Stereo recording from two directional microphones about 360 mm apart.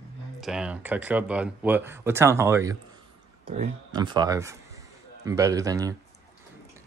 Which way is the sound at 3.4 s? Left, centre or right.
Centre.